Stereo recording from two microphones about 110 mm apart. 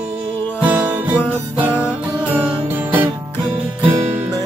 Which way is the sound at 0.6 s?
15° right (ahead or behind).